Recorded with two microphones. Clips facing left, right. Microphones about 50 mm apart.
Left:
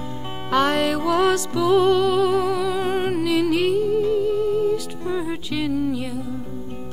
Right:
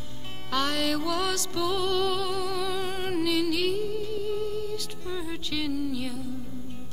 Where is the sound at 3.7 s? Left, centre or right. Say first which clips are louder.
Left 10 dB; centre.